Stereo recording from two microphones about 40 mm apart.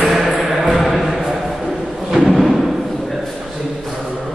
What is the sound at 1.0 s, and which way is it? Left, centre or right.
Thump, centre.